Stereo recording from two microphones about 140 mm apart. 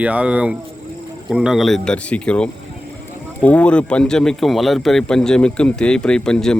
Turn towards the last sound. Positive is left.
turn(degrees=5)  # may be behind; listen again after turning